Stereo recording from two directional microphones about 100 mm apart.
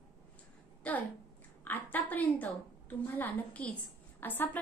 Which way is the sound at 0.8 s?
15° left (ahead or behind).